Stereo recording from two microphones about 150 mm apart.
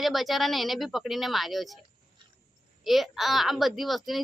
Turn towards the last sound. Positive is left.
turn(degrees=0)  # may be behind; listen again after turning